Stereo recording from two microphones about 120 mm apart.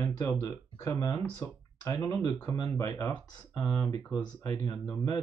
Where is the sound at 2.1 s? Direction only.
25° left (ahead or behind).